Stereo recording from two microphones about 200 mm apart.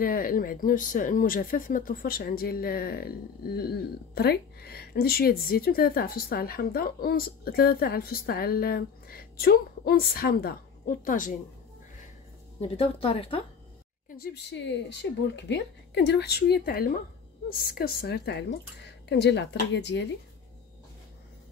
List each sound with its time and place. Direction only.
0.0 s speech: 45° left (ahead or behind)
12.5 s speech: 30° left (ahead or behind)
14.0 s a woman's voice: 45° left (ahead or behind)